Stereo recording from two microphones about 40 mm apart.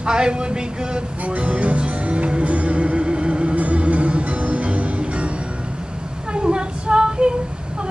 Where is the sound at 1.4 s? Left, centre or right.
Right.